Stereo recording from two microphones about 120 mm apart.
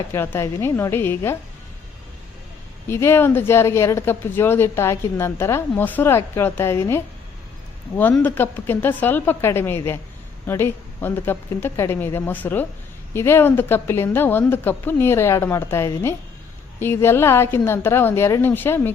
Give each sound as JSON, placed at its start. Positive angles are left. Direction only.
{"t": 0.1, "sound": "speech", "side_deg": 25}
{"t": 2.9, "sound": "speech", "side_deg": 20}
{"t": 8.2, "sound": "a woman's voice", "side_deg": 15}